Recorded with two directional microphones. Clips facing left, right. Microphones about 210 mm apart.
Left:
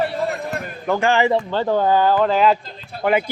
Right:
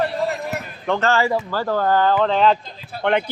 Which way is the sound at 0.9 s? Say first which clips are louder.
Left 2 dB; 10° left (ahead or behind).